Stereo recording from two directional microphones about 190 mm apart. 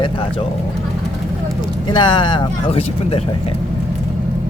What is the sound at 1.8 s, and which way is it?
Speech, 25° left (ahead or behind).